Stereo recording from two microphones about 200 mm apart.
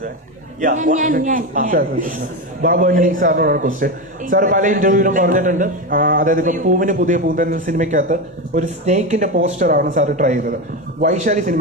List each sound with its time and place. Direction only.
0.6 s a man's voice: 40° right (ahead or behind)